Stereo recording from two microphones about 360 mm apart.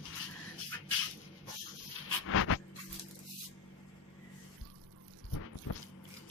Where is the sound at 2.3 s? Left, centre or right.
Left.